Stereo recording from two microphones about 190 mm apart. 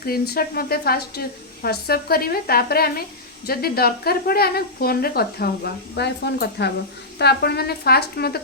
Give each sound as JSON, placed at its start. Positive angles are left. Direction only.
{"t": 0.0, "sound": "a woman's voice", "side_deg": 55}